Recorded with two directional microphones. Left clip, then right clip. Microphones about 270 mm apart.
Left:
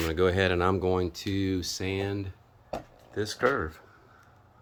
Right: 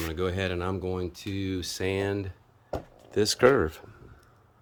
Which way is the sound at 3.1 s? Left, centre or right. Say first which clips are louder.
Right 6 dB; right.